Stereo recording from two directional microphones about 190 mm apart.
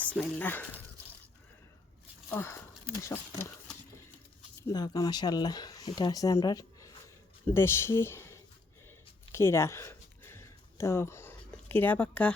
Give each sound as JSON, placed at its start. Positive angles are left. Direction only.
{"t": 0.2, "sound": "speech", "side_deg": 10}
{"t": 2.3, "sound": "speech", "side_deg": 15}
{"t": 4.6, "sound": "speech", "side_deg": 20}
{"t": 9.3, "sound": "a sound", "side_deg": 15}